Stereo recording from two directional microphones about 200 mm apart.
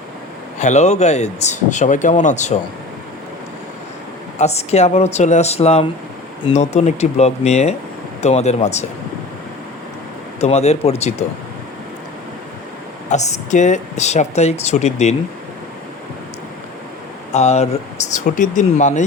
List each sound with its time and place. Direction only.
0.6 s speech: 35° left (ahead or behind)
4.4 s speech: 35° left (ahead or behind)
10.4 s speech: 30° left (ahead or behind)
13.1 s speech: 35° left (ahead or behind)
17.3 s speech: 35° left (ahead or behind)